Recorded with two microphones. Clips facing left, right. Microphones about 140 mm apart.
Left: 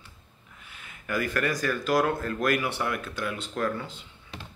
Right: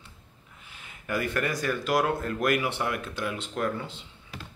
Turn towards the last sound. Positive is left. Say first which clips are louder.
# even
turn(degrees=-20)  # may be behind; listen again after turning